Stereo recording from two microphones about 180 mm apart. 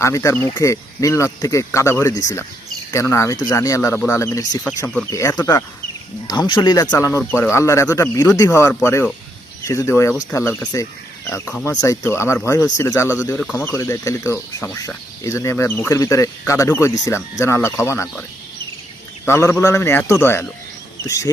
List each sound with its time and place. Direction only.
0.0 s speech: 15° left (ahead or behind)
13.4 s speech: centre (ahead or behind)
13.7 s speech: 15° left (ahead or behind)